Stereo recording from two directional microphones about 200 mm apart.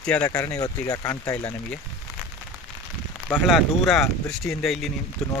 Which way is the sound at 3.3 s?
Centre (ahead or behind).